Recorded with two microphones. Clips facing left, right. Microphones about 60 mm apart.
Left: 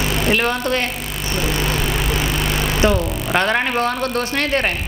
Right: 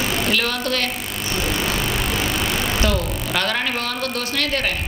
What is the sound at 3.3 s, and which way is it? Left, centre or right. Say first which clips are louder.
Speech: left 5 dB; left.